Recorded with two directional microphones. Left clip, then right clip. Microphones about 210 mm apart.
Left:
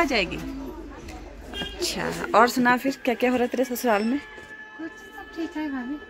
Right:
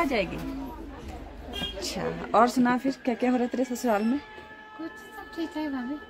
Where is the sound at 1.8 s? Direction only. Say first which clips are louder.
Left 8 dB; centre (ahead or behind).